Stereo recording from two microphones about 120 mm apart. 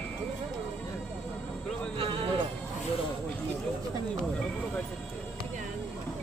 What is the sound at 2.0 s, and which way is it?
Music, 50° right (ahead or behind).